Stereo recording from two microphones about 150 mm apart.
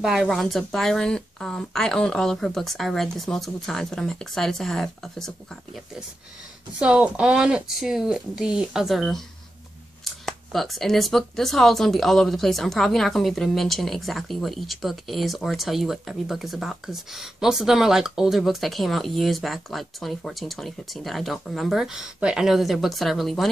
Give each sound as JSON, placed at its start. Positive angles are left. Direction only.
{"t": 0.0, "sound": "speech", "side_deg": 0}
{"t": 10.2, "sound": "speech", "side_deg": 0}